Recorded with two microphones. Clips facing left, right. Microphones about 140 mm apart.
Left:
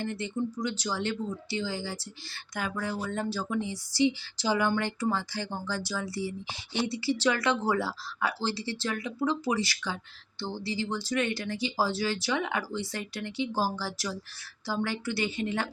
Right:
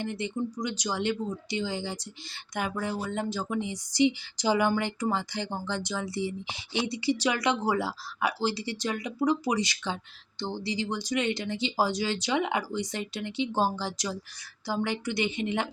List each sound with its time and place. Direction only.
0.0 s speech: 15° right (ahead or behind)